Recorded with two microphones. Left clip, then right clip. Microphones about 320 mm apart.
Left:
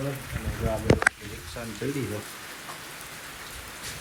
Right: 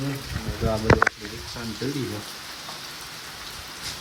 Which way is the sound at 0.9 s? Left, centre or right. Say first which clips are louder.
Right 8 dB; left.